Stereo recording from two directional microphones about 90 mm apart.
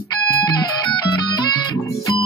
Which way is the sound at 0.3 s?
40° left (ahead or behind).